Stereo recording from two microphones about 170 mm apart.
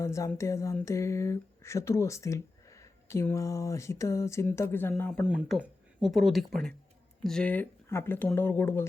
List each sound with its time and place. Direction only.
0.0 s speech: 15° left (ahead or behind)
5.2 s speech: 5° right (ahead or behind); by 8.8 s 15° left (ahead or behind)